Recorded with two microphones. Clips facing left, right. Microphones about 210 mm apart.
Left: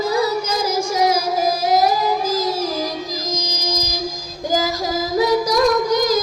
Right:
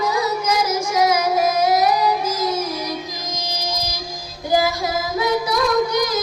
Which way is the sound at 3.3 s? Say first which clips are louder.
Even; 40° left (ahead or behind).